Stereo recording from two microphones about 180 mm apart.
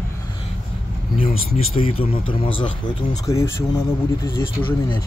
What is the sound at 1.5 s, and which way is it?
Speech, 30° left (ahead or behind).